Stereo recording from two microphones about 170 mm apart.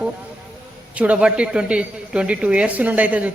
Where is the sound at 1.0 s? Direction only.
5° right (ahead or behind).